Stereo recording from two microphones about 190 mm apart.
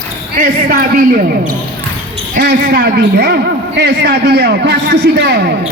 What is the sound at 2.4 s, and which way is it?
Speech, 60° right (ahead or behind).